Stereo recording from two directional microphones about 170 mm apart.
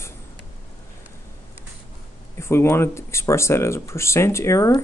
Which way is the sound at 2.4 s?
15° left (ahead or behind).